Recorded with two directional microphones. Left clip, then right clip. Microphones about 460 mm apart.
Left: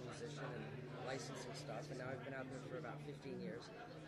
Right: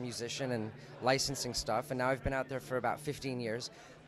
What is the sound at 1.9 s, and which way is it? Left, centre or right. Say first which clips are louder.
A man's voice: right 15 dB; right.